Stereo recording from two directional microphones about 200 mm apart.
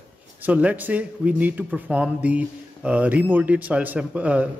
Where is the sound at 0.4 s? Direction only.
5° right (ahead or behind).